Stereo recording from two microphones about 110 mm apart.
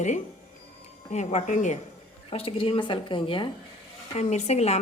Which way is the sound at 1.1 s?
90° left.